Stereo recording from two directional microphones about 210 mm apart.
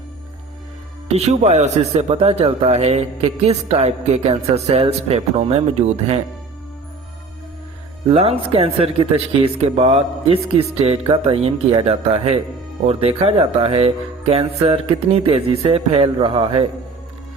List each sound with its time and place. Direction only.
1.0 s a man's voice: 30° right (ahead or behind)
8.1 s speech: 30° right (ahead or behind)